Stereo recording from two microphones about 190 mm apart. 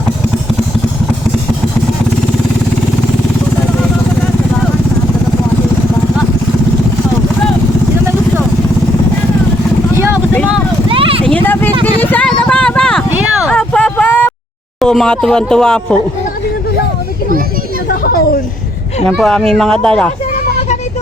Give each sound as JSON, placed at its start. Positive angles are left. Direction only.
{"t": 9.9, "sound": "vehicle", "side_deg": -15}
{"t": 10.8, "sound": "vehicle", "side_deg": -30}
{"t": 11.4, "sound": "vehicle", "side_deg": 10}
{"t": 11.9, "sound": "a sound", "side_deg": 10}
{"t": 14.8, "sound": "speech", "side_deg": 0}
{"t": 17.8, "sound": "a sound", "side_deg": 50}
{"t": 19.0, "sound": "speech", "side_deg": 5}